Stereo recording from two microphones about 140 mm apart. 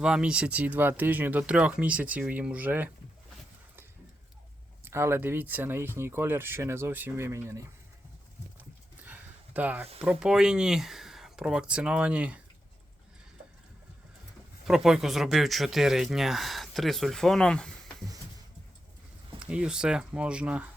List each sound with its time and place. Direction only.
0.0 s speech: 5° right (ahead or behind)
4.9 s speech: 20° right (ahead or behind)
9.0 s a sound: 10° right (ahead or behind)
10.0 s speech: 5° right (ahead or behind)
14.7 s speech: centre (ahead or behind)
19.4 s speech: 10° right (ahead or behind)